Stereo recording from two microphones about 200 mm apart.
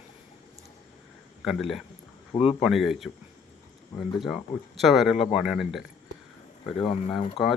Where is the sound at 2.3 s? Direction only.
30° left (ahead or behind).